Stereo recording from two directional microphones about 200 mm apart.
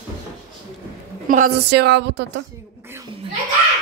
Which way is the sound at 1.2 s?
40° right (ahead or behind).